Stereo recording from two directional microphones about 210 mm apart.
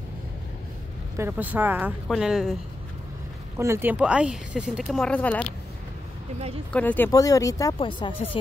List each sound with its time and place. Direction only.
1.1 s a woman's voice: 10° right (ahead or behind)
3.5 s speech: 10° right (ahead or behind); by 5.5 s 5° left (ahead or behind)
6.7 s speech: 10° left (ahead or behind); by 8.4 s 25° left (ahead or behind)